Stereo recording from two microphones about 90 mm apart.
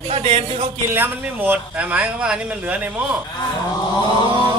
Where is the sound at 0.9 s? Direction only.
20° right (ahead or behind).